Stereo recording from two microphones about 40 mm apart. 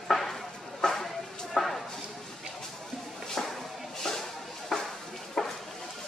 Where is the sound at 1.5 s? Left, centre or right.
Centre.